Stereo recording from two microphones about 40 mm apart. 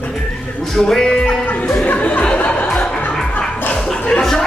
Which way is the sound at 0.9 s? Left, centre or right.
Centre.